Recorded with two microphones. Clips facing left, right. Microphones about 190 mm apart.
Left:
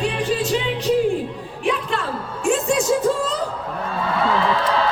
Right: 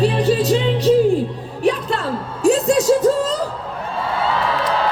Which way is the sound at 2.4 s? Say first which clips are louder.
Right 5 dB; 35° right (ahead or behind).